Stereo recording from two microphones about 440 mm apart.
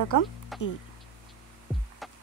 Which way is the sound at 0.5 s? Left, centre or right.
Centre.